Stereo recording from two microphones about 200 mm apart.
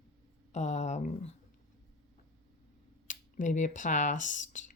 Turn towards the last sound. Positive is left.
turn(degrees=40)  # may be behind; listen again after turning